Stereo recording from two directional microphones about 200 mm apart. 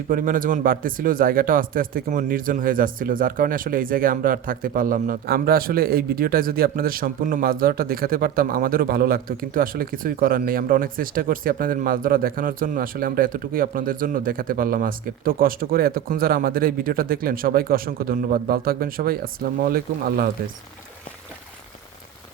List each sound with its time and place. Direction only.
0.1 s speech: 45° right (ahead or behind)